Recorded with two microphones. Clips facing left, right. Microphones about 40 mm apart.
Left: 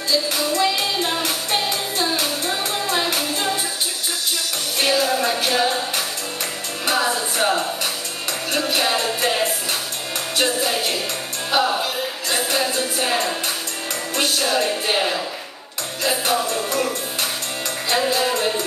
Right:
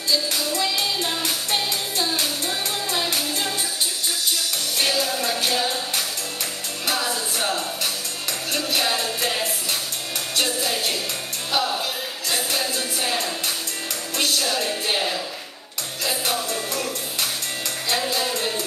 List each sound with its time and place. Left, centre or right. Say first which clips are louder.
0.1 s music: left 3 dB; centre
4.7 s music: left 5 dB; centre
11.8 s music: left 4 dB; centre